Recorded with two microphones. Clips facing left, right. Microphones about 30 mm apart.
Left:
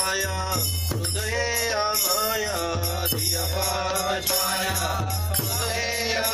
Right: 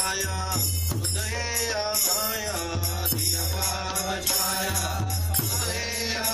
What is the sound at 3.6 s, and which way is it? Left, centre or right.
Mantra, centre.